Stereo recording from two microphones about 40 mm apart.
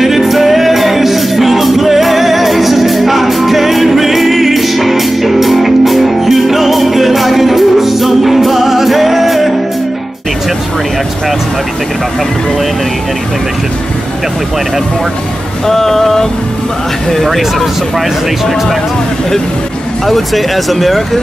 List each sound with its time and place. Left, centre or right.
0.0 s music: centre
15.6 s vehicle: centre
17.1 s a sound: centre
20.1 s speech: centre